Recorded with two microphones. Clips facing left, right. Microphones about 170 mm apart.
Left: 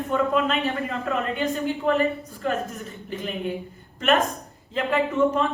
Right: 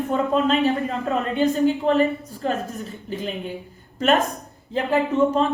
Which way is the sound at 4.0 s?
35° right (ahead or behind).